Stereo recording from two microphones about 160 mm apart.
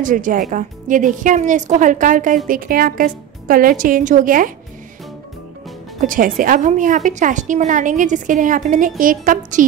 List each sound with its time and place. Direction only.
0.0 s a woman's voice: 55° right (ahead or behind)
5.9 s a woman's voice: 60° right (ahead or behind)